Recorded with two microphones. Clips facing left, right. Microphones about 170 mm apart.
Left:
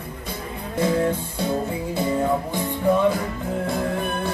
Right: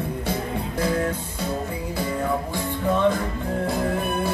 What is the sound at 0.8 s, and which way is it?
Music, 25° left (ahead or behind).